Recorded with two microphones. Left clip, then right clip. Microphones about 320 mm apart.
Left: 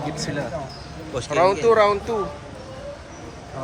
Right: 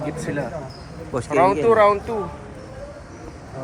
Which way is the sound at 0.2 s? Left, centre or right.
Centre.